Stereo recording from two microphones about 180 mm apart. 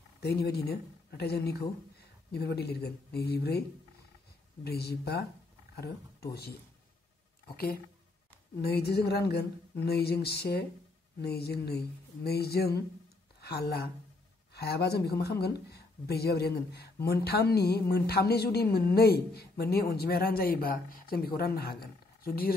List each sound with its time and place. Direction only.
0.2 s speech: 60° left (ahead or behind)
4.6 s speech: 60° left (ahead or behind)
8.5 s speech: 65° left (ahead or behind)